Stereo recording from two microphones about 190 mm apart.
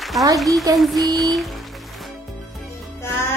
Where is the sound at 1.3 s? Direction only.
Centre (ahead or behind).